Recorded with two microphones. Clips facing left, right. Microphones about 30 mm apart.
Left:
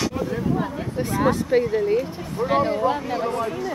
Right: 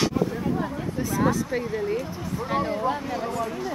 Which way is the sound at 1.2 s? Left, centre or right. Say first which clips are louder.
Left 6 dB; left.